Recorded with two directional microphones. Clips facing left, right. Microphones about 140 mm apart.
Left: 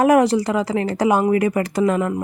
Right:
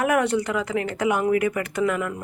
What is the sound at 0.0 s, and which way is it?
Speech, 35° left (ahead or behind).